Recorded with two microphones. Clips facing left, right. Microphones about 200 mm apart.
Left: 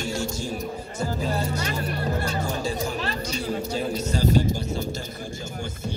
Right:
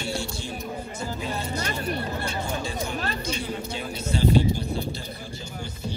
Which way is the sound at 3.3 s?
40° left (ahead or behind).